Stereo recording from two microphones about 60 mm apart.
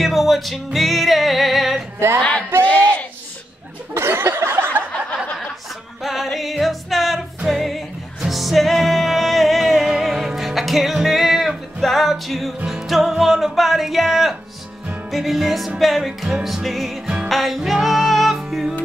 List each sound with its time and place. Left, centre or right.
0.0 s music: centre
2.6 s a sound: left
3.9 s a sound: right
6.0 s music: centre
13.2 s speech: centre
15.0 s music: centre